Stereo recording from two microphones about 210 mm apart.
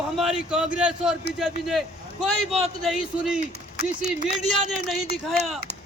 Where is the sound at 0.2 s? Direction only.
Centre (ahead or behind).